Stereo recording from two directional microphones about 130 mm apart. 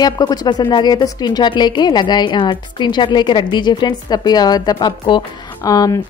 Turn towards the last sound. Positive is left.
turn(degrees=30)  # may be behind; listen again after turning